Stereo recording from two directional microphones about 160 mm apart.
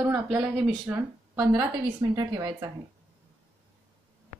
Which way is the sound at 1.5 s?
25° right (ahead or behind).